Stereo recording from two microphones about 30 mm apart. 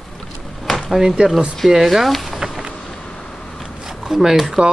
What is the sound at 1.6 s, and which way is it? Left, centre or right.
Speech, centre.